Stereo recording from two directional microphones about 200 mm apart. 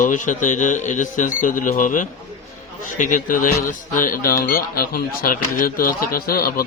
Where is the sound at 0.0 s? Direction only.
40° left (ahead or behind).